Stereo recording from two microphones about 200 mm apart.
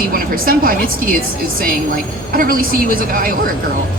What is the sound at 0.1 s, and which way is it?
A woman's voice, 45° right (ahead or behind).